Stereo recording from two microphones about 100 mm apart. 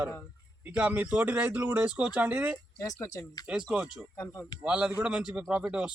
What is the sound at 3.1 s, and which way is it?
Speech, 35° left (ahead or behind).